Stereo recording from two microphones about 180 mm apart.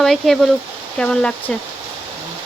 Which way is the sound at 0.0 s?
Centre (ahead or behind).